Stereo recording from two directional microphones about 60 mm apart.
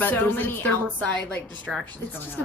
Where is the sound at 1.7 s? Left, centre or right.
Centre.